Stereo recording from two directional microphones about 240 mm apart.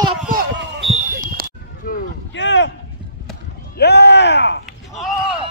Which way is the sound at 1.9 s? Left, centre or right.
Left.